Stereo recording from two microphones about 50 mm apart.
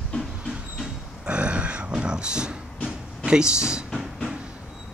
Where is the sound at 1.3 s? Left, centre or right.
Right.